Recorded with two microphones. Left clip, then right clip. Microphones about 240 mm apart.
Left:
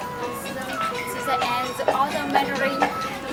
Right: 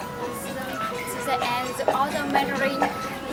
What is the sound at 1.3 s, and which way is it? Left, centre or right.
Speech, centre.